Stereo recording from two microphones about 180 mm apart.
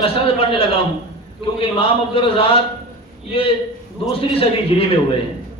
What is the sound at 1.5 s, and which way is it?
A man's voice, 30° left (ahead or behind).